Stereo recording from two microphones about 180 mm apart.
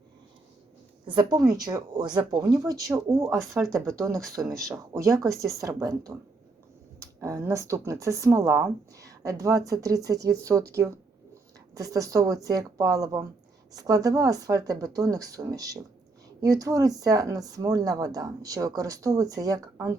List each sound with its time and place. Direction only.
1.0 s speech: 25° right (ahead or behind)
3.2 s speech: centre (ahead or behind)
3.7 s speech: 15° right (ahead or behind)